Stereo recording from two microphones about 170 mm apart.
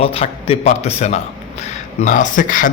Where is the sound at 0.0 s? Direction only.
35° left (ahead or behind).